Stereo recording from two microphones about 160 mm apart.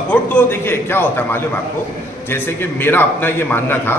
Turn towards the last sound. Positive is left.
turn(degrees=15)  # may be behind; listen again after turning